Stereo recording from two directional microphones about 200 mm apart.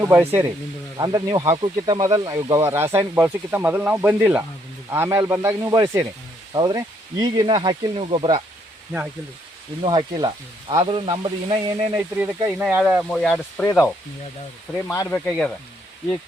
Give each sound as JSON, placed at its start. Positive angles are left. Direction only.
{"t": 0.0, "sound": "speech", "side_deg": -15}
{"t": 6.5, "sound": "sizzle", "side_deg": -20}
{"t": 9.8, "sound": "sizzle", "side_deg": -25}
{"t": 11.9, "sound": "speech", "side_deg": -10}
{"t": 14.9, "sound": "speech", "side_deg": 5}